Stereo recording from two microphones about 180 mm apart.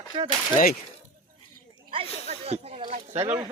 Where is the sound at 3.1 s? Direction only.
35° right (ahead or behind).